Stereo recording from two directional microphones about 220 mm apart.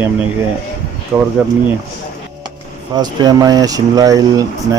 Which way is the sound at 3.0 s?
20° right (ahead or behind).